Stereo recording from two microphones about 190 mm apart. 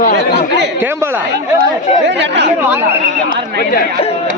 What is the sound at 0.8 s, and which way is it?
Speech, 10° right (ahead or behind).